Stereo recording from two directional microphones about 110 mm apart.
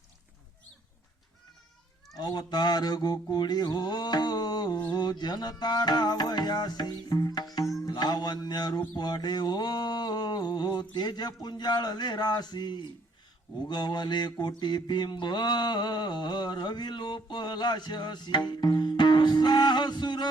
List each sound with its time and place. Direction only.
2.1 s mantra: 40° left (ahead or behind)